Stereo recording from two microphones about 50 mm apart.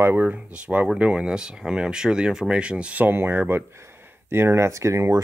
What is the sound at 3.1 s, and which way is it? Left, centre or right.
Speech, right.